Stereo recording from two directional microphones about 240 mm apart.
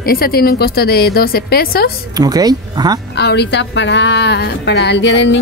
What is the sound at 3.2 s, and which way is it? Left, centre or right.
A woman's voice, left.